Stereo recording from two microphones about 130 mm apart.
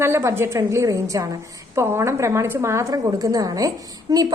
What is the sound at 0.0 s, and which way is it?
A woman's voice, 20° right (ahead or behind).